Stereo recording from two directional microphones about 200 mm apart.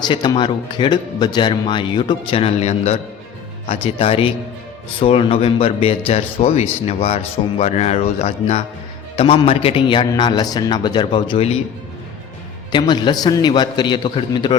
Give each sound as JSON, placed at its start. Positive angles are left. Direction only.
{"t": 0.0, "sound": "speech", "side_deg": 20}
{"t": 12.7, "sound": "speech", "side_deg": 20}